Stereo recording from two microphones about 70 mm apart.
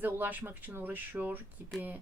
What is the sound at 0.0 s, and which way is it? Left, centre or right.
Speech, right.